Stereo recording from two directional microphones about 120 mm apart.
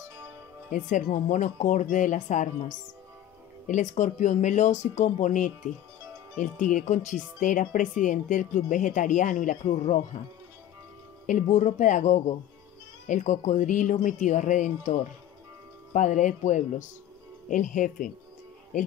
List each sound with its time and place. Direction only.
0.7 s speech: 90° left
11.2 s speech: 90° left